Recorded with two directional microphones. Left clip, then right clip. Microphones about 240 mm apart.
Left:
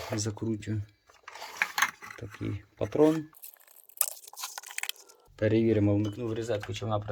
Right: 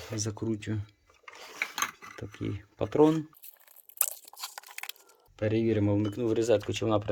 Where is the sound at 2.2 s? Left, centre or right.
Centre.